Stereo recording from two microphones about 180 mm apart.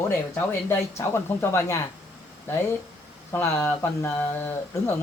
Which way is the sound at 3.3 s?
15° left (ahead or behind).